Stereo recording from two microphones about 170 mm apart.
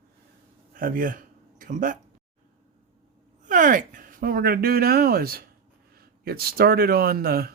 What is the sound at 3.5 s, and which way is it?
Speech, 50° right (ahead or behind).